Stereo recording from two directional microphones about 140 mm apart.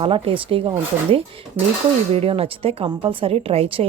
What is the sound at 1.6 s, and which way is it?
Speech, 15° right (ahead or behind).